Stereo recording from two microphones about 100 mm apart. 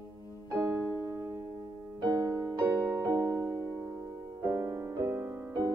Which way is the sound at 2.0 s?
40° right (ahead or behind).